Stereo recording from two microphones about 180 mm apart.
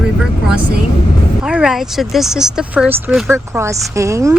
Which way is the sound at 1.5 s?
5° right (ahead or behind).